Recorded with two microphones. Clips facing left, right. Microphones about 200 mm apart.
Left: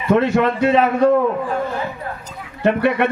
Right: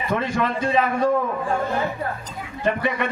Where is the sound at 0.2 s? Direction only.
65° left (ahead or behind).